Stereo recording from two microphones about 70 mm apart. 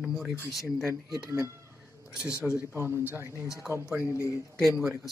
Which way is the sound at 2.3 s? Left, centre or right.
Left.